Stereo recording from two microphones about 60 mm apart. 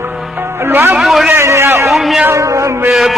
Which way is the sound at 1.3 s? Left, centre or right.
Right.